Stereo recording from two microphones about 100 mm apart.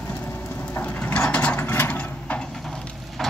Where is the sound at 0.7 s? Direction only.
15° left (ahead or behind).